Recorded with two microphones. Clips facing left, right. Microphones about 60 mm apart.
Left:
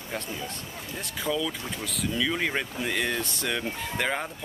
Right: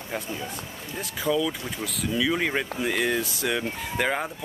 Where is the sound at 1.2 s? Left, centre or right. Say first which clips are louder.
Right 4 dB; centre.